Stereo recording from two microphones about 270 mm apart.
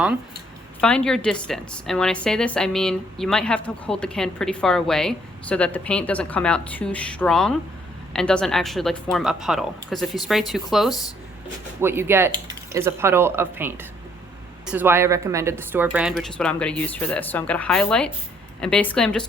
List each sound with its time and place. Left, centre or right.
0.8 s a woman's voice: centre